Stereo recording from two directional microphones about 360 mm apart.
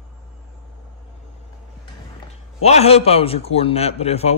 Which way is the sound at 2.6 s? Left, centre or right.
Centre.